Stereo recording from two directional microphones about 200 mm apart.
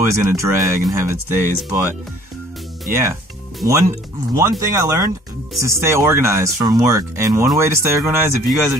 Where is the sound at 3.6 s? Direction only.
15° right (ahead or behind).